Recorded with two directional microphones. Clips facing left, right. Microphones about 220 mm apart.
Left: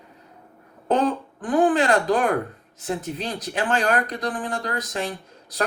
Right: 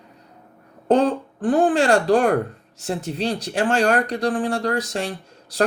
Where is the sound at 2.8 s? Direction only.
30° right (ahead or behind).